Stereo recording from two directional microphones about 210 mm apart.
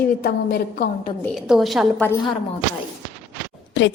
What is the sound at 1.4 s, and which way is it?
Speech, centre (ahead or behind).